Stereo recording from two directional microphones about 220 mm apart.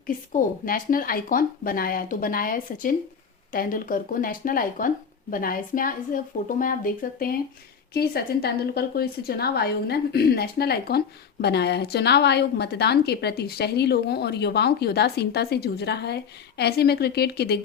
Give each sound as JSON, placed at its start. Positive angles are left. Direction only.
{"t": 0.1, "sound": "a woman's voice", "side_deg": 40}